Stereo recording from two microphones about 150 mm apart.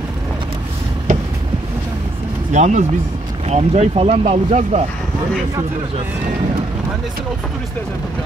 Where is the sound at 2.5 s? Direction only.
50° right (ahead or behind).